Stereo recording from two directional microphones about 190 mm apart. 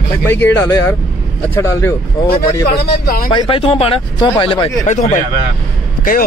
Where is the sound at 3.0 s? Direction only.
50° left (ahead or behind).